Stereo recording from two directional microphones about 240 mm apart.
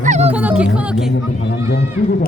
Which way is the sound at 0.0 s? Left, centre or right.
Right.